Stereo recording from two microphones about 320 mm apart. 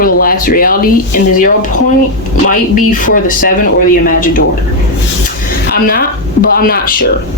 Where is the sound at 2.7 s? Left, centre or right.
Left.